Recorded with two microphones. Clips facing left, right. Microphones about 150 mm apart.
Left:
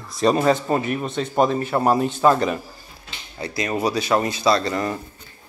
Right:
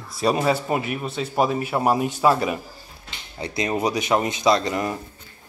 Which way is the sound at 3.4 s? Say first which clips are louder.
Even; 20° right (ahead or behind).